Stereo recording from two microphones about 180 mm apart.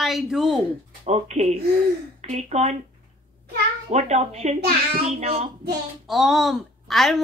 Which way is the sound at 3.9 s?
40° right (ahead or behind).